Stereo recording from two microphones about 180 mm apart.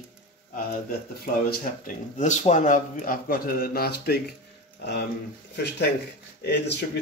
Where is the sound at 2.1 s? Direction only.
40° left (ahead or behind); by 4.2 s 60° left (ahead or behind).